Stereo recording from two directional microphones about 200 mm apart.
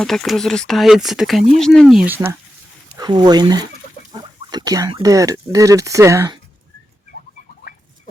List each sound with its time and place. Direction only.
0.0 s speech: centre (ahead or behind)
2.9 s speech: 20° right (ahead or behind)